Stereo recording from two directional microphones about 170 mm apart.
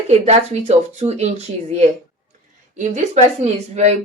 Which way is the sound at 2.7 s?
45° right (ahead or behind).